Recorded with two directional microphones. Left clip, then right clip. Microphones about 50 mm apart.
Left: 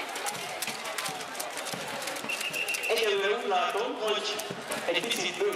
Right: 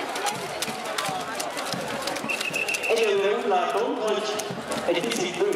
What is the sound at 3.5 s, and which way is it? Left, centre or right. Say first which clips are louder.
Speech: right 5 dB; left.